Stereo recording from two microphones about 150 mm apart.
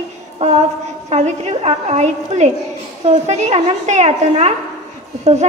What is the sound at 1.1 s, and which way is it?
A child's voice, 45° right (ahead or behind).